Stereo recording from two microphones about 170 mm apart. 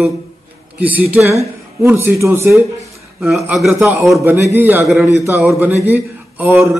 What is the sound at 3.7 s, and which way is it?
A man's voice, 15° right (ahead or behind).